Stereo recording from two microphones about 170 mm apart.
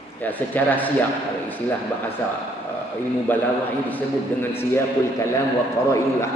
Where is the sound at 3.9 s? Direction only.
15° left (ahead or behind).